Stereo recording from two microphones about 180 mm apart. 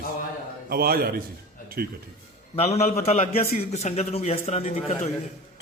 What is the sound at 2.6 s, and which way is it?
A man's voice, 35° left (ahead or behind).